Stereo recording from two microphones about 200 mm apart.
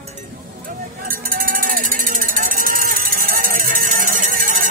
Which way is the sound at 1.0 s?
45° right (ahead or behind).